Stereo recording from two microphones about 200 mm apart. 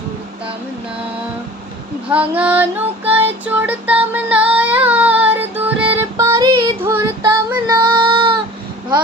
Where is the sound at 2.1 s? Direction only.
5° right (ahead or behind).